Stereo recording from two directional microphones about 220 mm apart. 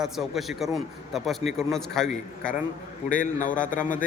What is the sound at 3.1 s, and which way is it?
Speech, 35° left (ahead or behind).